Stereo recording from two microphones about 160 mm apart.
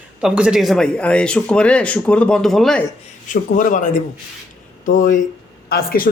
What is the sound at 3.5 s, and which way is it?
Speech, 55° left (ahead or behind).